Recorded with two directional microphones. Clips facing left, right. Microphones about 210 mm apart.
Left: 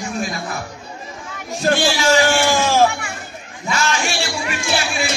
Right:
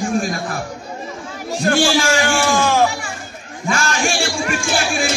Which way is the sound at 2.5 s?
25° left (ahead or behind).